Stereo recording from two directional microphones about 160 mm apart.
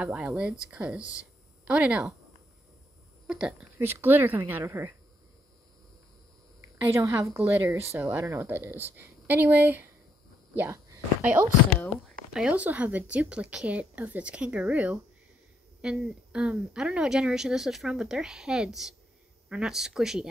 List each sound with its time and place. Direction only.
0.0 s speech: 5° right (ahead or behind)
3.3 s speech: 5° right (ahead or behind)
6.8 s speech: 20° right (ahead or behind)
10.5 s a sound: 15° right (ahead or behind)
12.3 s a woman's voice: 5° right (ahead or behind)